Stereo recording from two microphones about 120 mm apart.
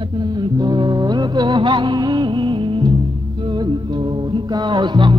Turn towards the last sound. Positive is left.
turn(degrees=-40)  # may be behind; listen again after turning